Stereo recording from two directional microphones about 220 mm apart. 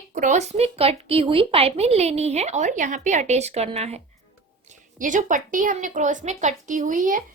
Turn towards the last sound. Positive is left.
turn(degrees=-35)  # may be behind; listen again after turning